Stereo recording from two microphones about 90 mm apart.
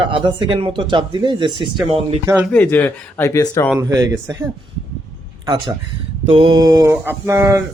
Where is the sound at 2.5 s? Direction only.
20° left (ahead or behind).